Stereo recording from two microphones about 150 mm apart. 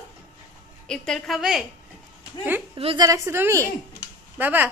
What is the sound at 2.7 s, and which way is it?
Speech, 40° right (ahead or behind).